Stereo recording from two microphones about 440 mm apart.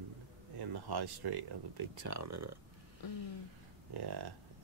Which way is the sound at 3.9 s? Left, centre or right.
Right.